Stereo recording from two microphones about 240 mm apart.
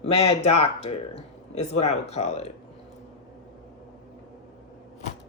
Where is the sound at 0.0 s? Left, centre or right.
Left.